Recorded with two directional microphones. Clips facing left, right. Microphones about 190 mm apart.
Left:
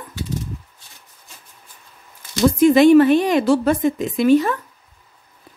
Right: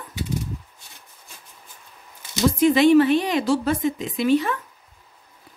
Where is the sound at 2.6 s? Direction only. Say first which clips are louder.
Left 4 dB; 45° left (ahead or behind).